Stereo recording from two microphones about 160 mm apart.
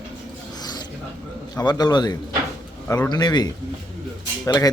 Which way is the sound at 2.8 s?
15° left (ahead or behind).